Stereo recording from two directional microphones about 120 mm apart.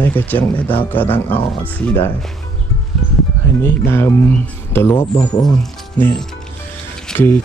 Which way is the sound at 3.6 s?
20° left (ahead or behind).